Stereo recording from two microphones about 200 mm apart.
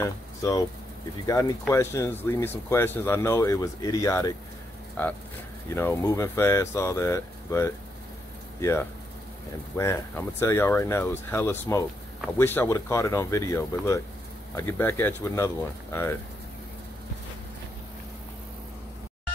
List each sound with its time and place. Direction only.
0.0 s speech: 15° left (ahead or behind)